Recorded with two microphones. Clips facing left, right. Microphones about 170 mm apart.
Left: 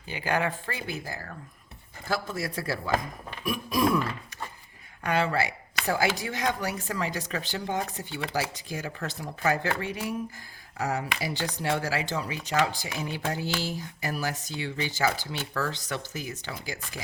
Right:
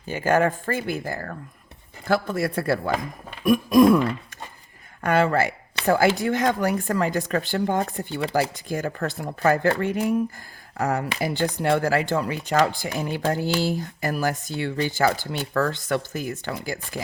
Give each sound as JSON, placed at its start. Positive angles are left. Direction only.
{"t": 0.1, "sound": "speech", "side_deg": -45}
{"t": 5.0, "sound": "speech", "side_deg": -50}